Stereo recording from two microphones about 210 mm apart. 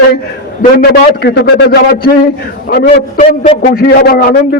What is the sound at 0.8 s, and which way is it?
A man's voice, 50° left (ahead or behind).